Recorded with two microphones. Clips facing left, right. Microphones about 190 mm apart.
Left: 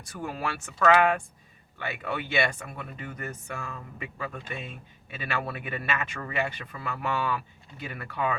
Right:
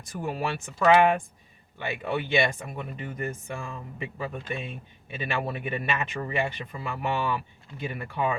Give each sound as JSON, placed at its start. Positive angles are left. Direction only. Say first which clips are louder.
{"t": 0.2, "sound": "speech", "louder": "right 3 dB", "side_deg": -20}